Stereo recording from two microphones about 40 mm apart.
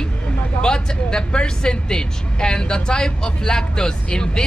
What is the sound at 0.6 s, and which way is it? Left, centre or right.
A woman's voice, left.